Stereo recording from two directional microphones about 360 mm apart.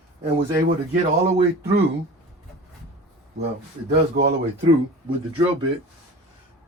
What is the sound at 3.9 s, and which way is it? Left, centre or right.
Speech, right.